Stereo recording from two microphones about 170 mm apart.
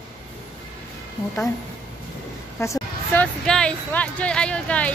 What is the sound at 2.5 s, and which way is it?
Speech, 15° left (ahead or behind).